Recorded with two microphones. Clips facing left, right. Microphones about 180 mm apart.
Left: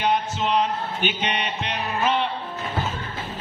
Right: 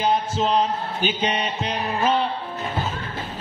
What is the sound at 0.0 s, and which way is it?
Music, 35° right (ahead or behind).